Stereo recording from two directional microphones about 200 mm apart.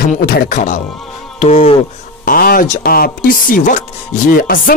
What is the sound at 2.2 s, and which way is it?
Speech, 45° left (ahead or behind).